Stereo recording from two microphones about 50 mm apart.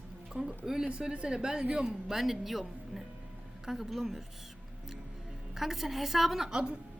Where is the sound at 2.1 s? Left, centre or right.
Centre.